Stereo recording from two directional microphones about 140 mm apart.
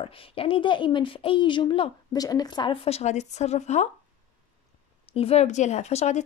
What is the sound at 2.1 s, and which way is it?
Speech, 25° left (ahead or behind).